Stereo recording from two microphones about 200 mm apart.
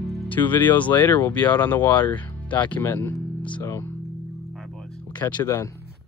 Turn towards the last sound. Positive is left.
turn(degrees=15)  # may be behind; listen again after turning